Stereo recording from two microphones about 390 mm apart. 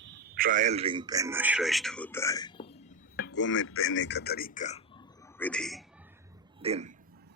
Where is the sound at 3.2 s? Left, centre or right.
Left.